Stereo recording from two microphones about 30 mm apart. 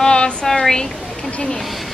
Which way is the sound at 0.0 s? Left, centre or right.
Left.